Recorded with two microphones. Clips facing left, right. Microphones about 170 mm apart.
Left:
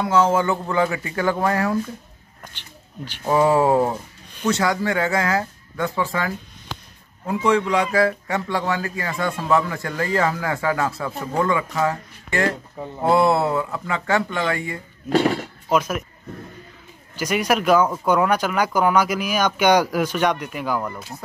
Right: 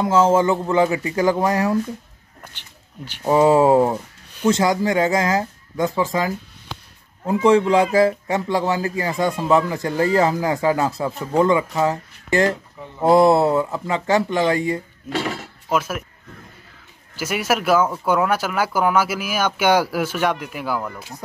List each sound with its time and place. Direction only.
0.0 s speech: 25° right (ahead or behind)
3.1 s speech: 20° right (ahead or behind)
7.4 s speech: 30° right (ahead or behind)
12.8 s speech: 35° left (ahead or behind)
13.2 s speech: 25° right (ahead or behind)
15.7 s speech: 5° right (ahead or behind)
17.2 s speech: 5° right (ahead or behind)